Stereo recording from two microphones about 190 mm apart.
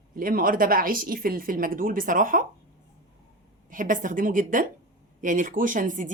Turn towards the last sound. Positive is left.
turn(degrees=-45)  # may be behind; listen again after turning